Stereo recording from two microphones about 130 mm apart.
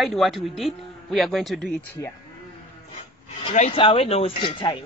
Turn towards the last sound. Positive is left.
turn(degrees=40)  # may be behind; listen again after turning